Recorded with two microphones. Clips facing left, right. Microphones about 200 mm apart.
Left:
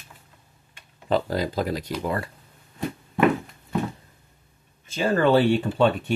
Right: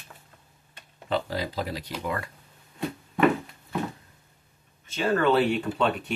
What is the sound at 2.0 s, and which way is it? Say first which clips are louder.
Speech: left 2 dB; 35° left (ahead or behind).